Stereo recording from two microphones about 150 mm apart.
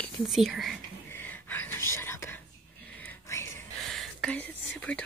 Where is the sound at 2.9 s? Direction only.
10° left (ahead or behind).